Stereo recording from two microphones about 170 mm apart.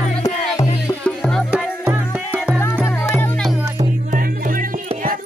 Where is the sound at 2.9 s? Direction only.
15° left (ahead or behind).